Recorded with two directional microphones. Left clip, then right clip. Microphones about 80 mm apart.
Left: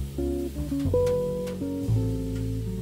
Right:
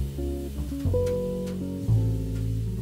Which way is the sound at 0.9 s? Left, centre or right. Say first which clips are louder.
Left 2 dB; centre.